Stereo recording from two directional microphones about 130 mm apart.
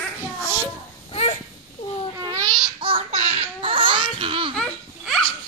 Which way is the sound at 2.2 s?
30° right (ahead or behind).